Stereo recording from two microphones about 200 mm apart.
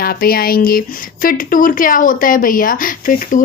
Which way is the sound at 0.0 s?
50° left (ahead or behind).